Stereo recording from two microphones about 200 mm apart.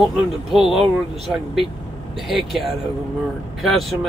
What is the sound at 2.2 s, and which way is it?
Speech, centre (ahead or behind).